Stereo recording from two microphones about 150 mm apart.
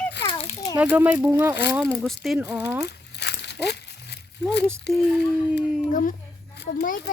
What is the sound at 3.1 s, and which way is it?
Crumpling, 90° left.